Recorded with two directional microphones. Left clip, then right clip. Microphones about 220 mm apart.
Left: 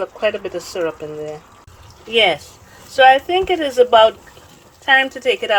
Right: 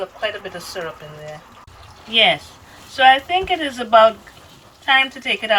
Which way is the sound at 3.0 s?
55° left (ahead or behind).